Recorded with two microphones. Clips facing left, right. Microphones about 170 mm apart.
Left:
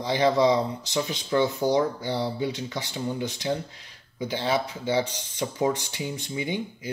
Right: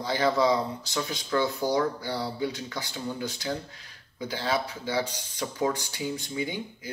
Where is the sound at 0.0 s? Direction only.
20° left (ahead or behind).